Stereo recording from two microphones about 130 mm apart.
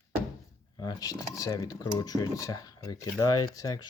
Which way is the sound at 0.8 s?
30° left (ahead or behind).